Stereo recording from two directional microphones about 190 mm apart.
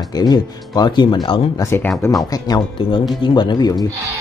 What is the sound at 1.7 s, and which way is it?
Speech, 10° left (ahead or behind).